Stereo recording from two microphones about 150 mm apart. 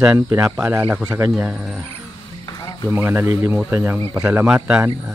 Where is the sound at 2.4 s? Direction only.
25° left (ahead or behind).